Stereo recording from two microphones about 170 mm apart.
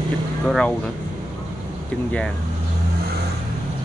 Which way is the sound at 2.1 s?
5° left (ahead or behind).